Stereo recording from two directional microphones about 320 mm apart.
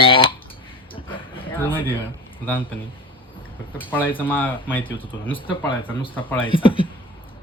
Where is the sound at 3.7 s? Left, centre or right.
Centre.